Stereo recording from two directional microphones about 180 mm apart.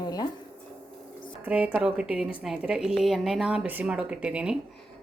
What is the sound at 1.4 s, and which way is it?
A woman's voice, 10° right (ahead or behind).